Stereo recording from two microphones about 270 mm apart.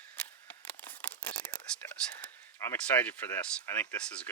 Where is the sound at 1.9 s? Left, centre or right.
Centre.